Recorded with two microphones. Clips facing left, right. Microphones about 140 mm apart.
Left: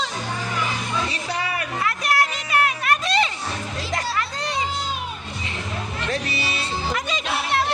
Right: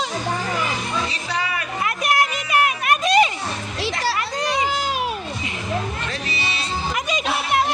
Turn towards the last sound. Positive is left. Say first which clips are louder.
# right 3 dB
turn(degrees=-15)  # may be behind; listen again after turning